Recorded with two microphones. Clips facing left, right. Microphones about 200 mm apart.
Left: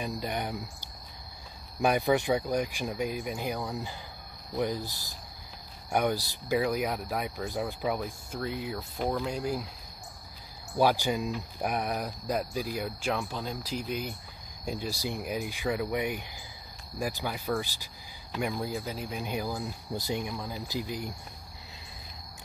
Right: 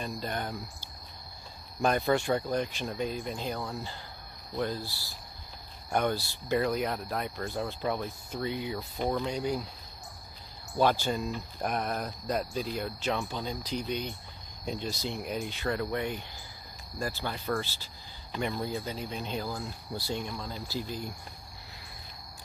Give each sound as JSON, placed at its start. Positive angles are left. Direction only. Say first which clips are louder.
{"t": 0.0, "sound": "speech", "louder": "left 2 dB", "side_deg": 15}
{"t": 10.8, "sound": "speech", "louder": "left 1 dB", "side_deg": 10}